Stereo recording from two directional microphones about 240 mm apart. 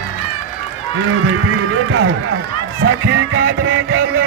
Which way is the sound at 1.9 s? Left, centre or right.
Right.